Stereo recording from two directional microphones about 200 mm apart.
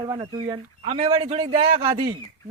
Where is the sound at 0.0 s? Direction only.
20° right (ahead or behind).